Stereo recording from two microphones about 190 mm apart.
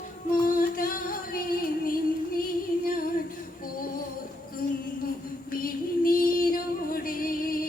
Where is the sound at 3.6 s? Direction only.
50° left (ahead or behind).